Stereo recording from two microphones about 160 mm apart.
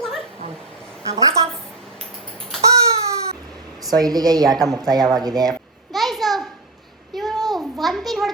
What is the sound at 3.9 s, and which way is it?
Speech, 25° right (ahead or behind).